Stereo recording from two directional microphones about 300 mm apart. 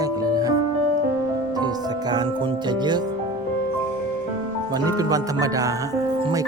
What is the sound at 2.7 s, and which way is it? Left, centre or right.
Music, centre.